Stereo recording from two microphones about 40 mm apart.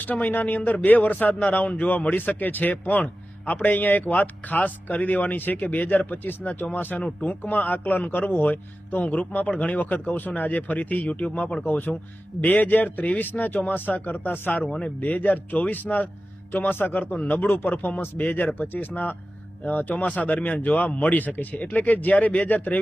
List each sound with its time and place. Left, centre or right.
0.0 s a man's voice: left
7.2 s a man's voice: left
11.6 s a man's voice: left
17.2 s a man's voice: left
17.4 s a man's voice: left
17.7 s a man's voice: left